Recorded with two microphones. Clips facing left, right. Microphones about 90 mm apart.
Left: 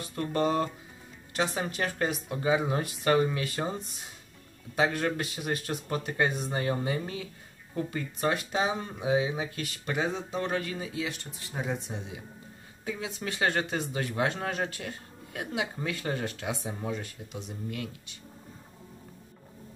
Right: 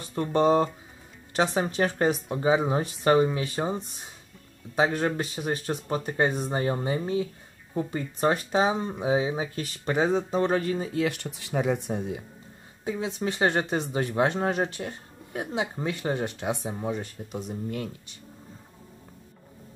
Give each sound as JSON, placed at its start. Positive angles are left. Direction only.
{"t": 0.1, "sound": "speech", "side_deg": -25}
{"t": 12.8, "sound": "speech", "side_deg": -30}
{"t": 17.0, "sound": "speech", "side_deg": -40}